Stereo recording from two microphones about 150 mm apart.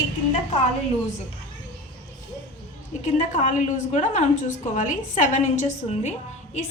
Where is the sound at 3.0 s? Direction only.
55° left (ahead or behind).